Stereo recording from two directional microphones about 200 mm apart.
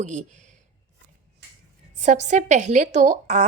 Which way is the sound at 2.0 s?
35° right (ahead or behind).